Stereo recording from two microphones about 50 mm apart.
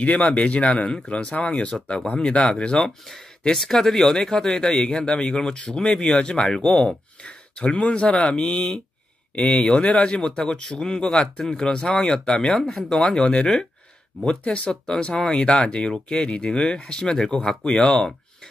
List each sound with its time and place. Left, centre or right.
0.0 s speech: left; by 13.2 s centre
13.2 s speech: centre